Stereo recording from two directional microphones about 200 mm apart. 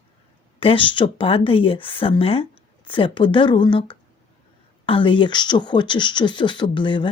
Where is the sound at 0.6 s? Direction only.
25° left (ahead or behind).